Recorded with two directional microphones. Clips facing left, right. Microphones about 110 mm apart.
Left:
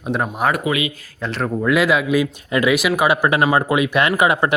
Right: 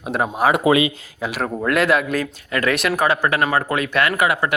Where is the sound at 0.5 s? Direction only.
30° right (ahead or behind).